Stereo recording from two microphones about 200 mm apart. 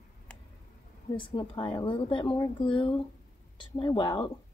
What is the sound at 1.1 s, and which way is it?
Speech, 25° left (ahead or behind).